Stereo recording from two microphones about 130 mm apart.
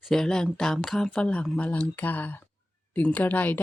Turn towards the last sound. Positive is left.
turn(degrees=15)  # may be behind; listen again after turning